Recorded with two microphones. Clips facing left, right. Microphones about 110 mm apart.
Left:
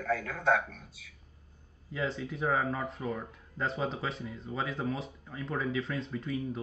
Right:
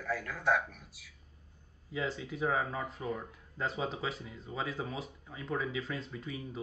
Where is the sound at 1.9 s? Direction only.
Centre (ahead or behind).